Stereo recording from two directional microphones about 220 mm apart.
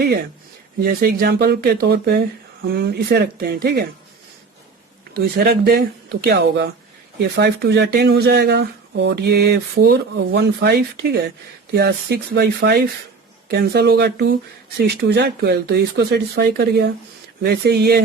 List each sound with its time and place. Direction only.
0.0 s speech: 45° right (ahead or behind)
5.1 s speech: 45° right (ahead or behind)